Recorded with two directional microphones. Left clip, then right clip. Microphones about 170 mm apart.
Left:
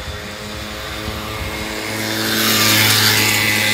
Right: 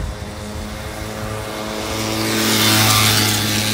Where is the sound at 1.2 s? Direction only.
40° left (ahead or behind).